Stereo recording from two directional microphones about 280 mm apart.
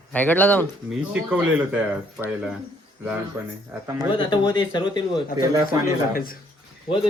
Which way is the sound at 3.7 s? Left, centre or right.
Centre.